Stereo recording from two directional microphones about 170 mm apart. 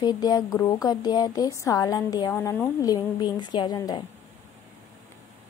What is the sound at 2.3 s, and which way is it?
Speech, 10° left (ahead or behind).